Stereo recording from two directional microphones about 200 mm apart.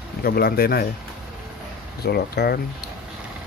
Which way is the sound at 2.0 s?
50° left (ahead or behind).